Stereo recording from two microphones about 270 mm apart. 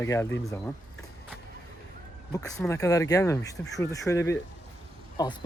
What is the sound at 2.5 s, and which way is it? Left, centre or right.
Speech, centre.